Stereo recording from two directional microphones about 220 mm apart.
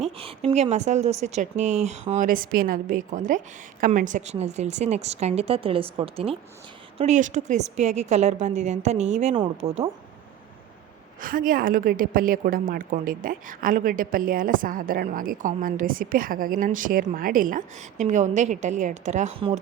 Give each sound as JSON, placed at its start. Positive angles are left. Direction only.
{"t": 0.0, "sound": "a woman's voice", "side_deg": -25}
{"t": 11.2, "sound": "a woman's voice", "side_deg": -40}